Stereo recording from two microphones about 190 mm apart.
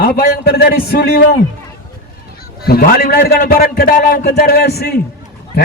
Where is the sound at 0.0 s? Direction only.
55° left (ahead or behind).